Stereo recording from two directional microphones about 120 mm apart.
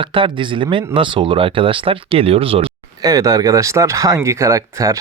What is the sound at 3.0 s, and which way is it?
Speech, 30° right (ahead or behind).